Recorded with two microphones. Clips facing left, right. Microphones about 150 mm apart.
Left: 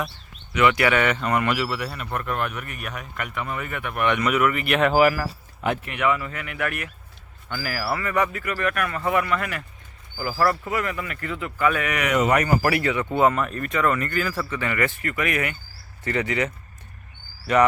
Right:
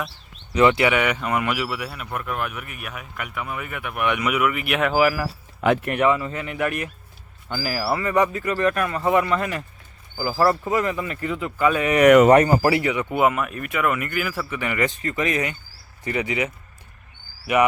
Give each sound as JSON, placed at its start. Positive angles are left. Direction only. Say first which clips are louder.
{"t": 0.5, "sound": "speech", "louder": "right 3 dB", "side_deg": -30}
{"t": 0.8, "sound": "speech", "louder": "even", "side_deg": -15}
{"t": 5.5, "sound": "speech", "louder": "right 6 dB", "side_deg": -90}
{"t": 6.0, "sound": "speech", "louder": "right 4 dB", "side_deg": -25}
{"t": 12.0, "sound": "speech", "louder": "right 11 dB", "side_deg": -55}
{"t": 12.3, "sound": "speech", "louder": "right 5 dB", "side_deg": -30}